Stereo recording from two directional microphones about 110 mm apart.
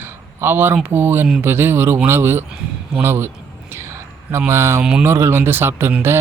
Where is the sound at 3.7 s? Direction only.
25° right (ahead or behind).